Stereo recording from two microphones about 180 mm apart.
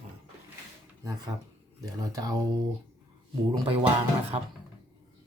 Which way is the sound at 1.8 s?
20° right (ahead or behind).